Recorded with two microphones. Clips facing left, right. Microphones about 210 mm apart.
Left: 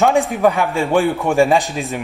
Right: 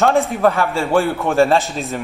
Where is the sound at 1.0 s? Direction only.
Centre (ahead or behind).